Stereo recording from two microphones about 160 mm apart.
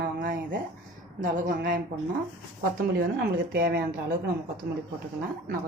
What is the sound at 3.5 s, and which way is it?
Speech, 65° right (ahead or behind).